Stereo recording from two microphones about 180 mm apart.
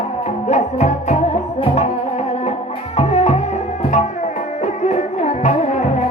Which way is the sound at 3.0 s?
35° left (ahead or behind).